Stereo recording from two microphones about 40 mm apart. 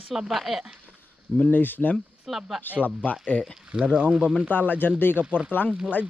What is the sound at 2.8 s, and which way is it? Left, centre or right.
Speech, left.